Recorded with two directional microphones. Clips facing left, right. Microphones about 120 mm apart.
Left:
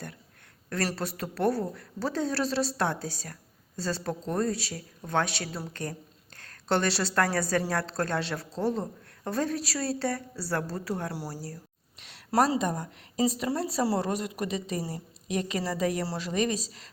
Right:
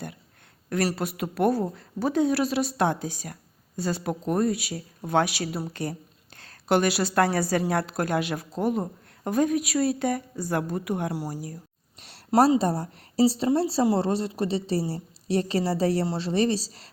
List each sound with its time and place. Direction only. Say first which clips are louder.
0.7 s a woman's voice: right 4 dB; 15° right (ahead or behind)
11.9 s a sound: right 2 dB; 35° right (ahead or behind)
12.3 s a woman's voice: right 5 dB; 20° right (ahead or behind)
12.5 s a woman's voice: right 5 dB; 35° right (ahead or behind)